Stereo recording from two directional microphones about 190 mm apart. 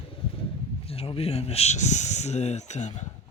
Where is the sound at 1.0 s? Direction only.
30° left (ahead or behind).